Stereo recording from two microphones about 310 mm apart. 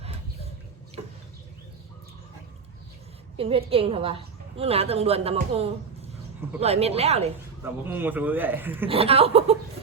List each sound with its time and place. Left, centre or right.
3.3 s a woman's voice: centre
7.6 s a man's voice: centre
8.9 s a woman's voice: centre